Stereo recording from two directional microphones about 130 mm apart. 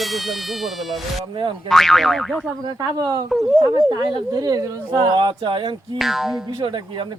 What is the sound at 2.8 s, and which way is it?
Speech, 30° right (ahead or behind).